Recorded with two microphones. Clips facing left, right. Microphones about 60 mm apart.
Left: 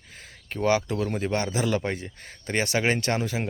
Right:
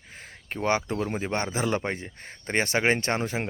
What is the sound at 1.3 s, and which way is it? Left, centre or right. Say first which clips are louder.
Speech: left 1 dB; right.